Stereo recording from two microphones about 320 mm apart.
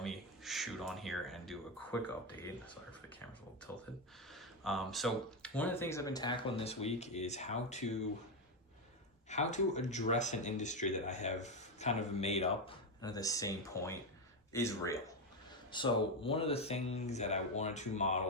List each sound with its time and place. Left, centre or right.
0.0 s speech: centre
4.4 s speech: centre; by 7.9 s left
9.3 s speech: left